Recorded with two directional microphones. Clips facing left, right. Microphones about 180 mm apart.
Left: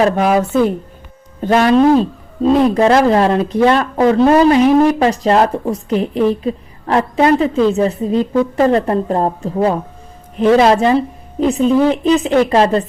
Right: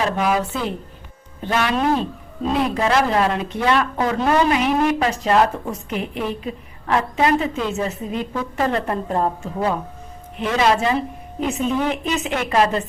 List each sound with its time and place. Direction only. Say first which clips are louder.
0.0 s a woman's voice: left 7 dB; 45° left (ahead or behind)